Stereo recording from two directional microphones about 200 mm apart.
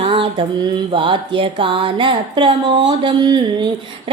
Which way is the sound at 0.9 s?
25° right (ahead or behind).